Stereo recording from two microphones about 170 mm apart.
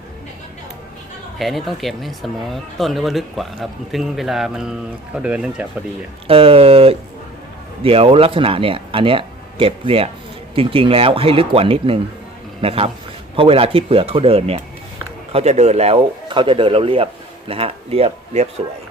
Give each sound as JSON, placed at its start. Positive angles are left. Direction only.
{"t": 1.4, "sound": "speech", "side_deg": 0}
{"t": 6.2, "sound": "speech", "side_deg": -35}